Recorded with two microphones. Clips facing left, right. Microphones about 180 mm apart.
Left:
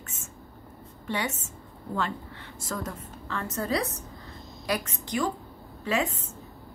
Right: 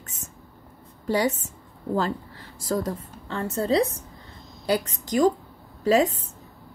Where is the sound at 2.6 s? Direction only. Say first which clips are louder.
Right 8 dB; 35° right (ahead or behind).